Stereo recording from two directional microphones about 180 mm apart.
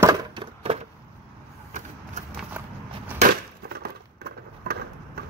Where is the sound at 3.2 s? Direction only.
40° right (ahead or behind).